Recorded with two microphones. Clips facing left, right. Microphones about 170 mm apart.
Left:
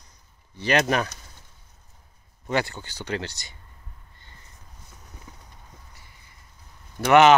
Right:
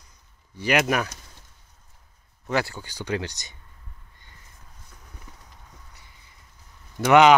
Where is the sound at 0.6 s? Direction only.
10° right (ahead or behind).